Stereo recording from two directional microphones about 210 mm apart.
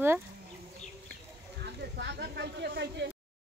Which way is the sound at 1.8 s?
55° right (ahead or behind).